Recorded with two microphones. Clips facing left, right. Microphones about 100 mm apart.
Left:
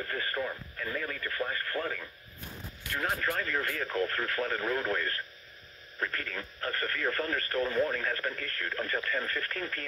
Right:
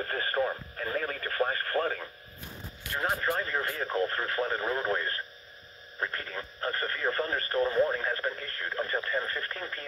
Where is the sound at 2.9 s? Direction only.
25° right (ahead or behind).